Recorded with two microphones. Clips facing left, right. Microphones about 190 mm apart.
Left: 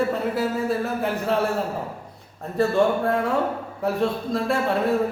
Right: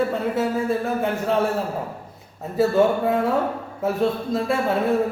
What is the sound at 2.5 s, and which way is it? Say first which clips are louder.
A man's voice: right 2 dB; 5° right (ahead or behind).